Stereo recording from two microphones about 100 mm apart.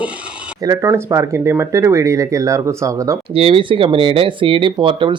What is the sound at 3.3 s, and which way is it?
Speech, 65° right (ahead or behind).